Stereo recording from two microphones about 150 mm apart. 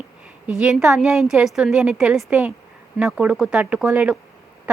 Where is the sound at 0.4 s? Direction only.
5° right (ahead or behind).